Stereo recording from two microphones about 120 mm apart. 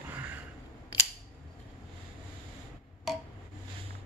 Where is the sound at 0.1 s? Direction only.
15° right (ahead or behind).